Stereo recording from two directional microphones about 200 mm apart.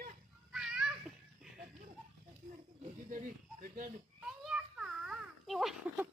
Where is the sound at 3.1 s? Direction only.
40° right (ahead or behind).